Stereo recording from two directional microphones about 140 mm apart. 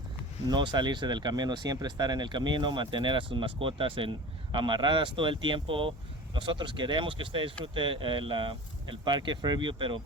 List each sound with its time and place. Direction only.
0.4 s speech: 30° right (ahead or behind)